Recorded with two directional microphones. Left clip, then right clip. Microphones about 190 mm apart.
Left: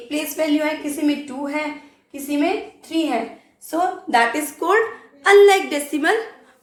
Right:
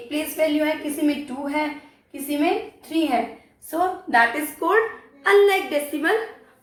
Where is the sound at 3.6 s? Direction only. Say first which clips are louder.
Left 2 dB; 45° left (ahead or behind).